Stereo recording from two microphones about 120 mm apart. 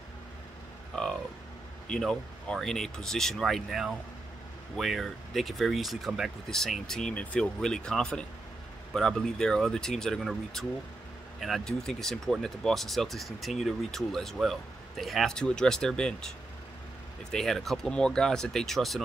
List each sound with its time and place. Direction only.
0.9 s speech: 5° left (ahead or behind)